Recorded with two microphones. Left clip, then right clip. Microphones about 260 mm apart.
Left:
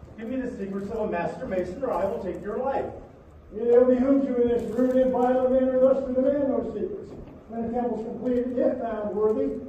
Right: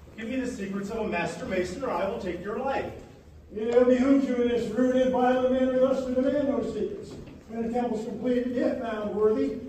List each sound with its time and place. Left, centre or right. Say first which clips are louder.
0.2 s a man's voice: left 1 dB; right